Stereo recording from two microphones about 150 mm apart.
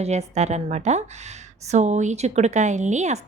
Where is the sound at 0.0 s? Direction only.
45° right (ahead or behind).